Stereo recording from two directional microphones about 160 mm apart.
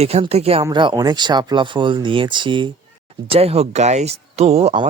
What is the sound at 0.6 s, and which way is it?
Speech, 30° right (ahead or behind).